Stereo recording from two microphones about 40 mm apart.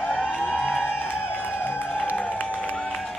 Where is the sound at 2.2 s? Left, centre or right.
Left.